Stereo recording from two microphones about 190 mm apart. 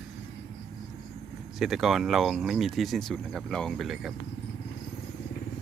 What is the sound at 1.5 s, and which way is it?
Speech, centre (ahead or behind).